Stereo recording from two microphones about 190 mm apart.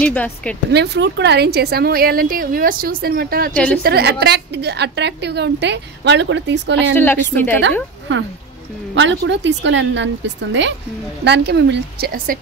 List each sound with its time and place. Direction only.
0.0 s a woman's voice: 5° left (ahead or behind)
0.7 s a woman's voice: 60° right (ahead or behind)
3.5 s a woman's voice: 5° left (ahead or behind)
3.8 s a woman's voice: 60° right (ahead or behind)
7.0 s a woman's voice: 10° left (ahead or behind)
8.1 s a woman's voice: 70° right (ahead or behind); by 12.4 s 50° right (ahead or behind)